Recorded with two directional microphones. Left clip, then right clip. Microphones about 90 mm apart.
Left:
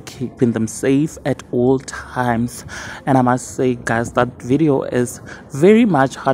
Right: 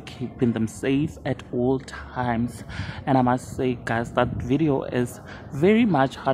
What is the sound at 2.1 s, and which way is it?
Speech, 55° left (ahead or behind).